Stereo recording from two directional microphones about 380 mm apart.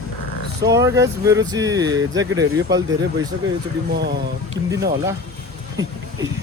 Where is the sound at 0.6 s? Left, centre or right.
Centre.